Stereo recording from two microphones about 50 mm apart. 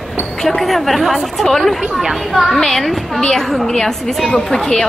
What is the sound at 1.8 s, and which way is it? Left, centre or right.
Speech, centre.